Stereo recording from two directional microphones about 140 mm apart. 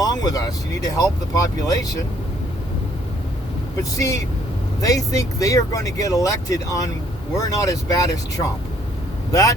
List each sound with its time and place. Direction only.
0.0 s speech: 25° left (ahead or behind)
3.9 s speech: 25° left (ahead or behind)